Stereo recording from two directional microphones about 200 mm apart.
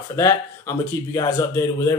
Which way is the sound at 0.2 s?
15° left (ahead or behind).